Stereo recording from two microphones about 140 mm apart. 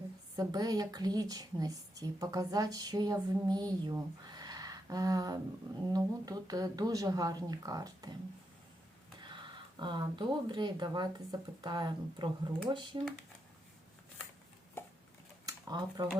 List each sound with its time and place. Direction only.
0.3 s speech: 25° right (ahead or behind)
9.2 s speech: 35° right (ahead or behind)
14.8 s chopping: 15° left (ahead or behind)
15.4 s a sound: 30° right (ahead or behind)